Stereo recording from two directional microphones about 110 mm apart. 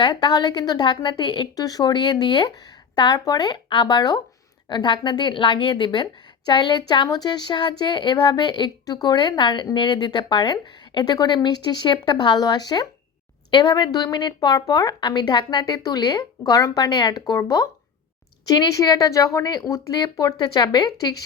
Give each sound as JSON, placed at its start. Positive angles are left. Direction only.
{"t": 0.0, "sound": "a woman's voice", "side_deg": 45}